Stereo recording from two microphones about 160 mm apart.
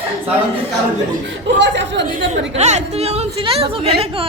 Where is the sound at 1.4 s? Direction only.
90° right.